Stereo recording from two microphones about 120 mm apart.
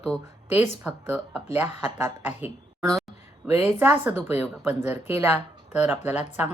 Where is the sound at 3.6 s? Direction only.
15° right (ahead or behind).